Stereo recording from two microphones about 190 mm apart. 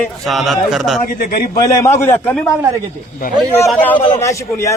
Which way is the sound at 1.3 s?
50° left (ahead or behind).